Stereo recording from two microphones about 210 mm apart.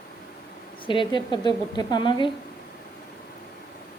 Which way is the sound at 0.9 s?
20° left (ahead or behind).